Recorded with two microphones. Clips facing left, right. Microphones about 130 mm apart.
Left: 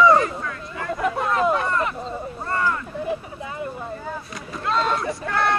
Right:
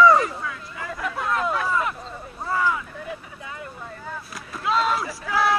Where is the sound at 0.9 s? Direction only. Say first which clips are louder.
Left 6 dB; 30° left (ahead or behind).